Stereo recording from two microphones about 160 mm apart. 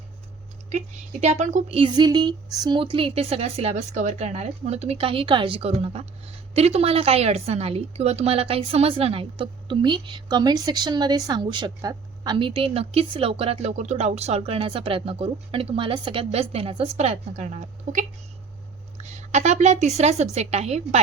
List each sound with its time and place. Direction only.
1.2 s a woman's voice: 45° right (ahead or behind)
1.8 s a woman's voice: 25° right (ahead or behind); by 18.0 s 45° right (ahead or behind)
19.1 s a woman's voice: 45° right (ahead or behind)